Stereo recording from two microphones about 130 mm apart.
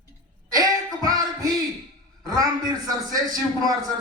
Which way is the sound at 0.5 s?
30° right (ahead or behind).